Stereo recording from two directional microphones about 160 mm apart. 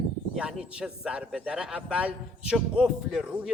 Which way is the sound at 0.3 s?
5° right (ahead or behind).